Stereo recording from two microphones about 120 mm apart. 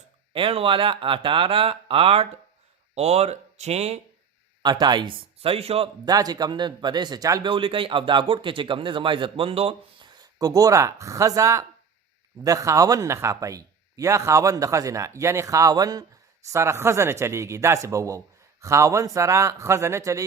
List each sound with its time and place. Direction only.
0.3 s a man's voice: 50° right (ahead or behind)
2.9 s speech: 65° right (ahead or behind)
4.6 s a man's voice: 35° right (ahead or behind); by 5.9 s 55° right (ahead or behind)
6.1 s a man's voice: 35° right (ahead or behind)
7.5 s a man's voice: 45° right (ahead or behind)
10.2 s speech: 30° right (ahead or behind)